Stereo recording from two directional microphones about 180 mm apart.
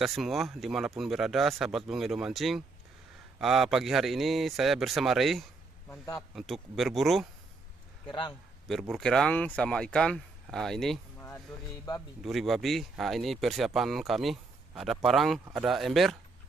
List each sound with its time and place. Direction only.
0.0 s speech: centre (ahead or behind)
5.9 s a man's voice: 15° left (ahead or behind)
6.3 s speech: centre (ahead or behind)
8.6 s speech: centre (ahead or behind)
12.2 s speech: centre (ahead or behind)